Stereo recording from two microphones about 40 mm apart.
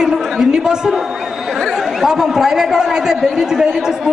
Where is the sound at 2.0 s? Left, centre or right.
Centre.